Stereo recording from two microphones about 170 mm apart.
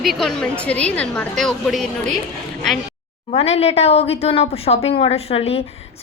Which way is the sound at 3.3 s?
35° left (ahead or behind).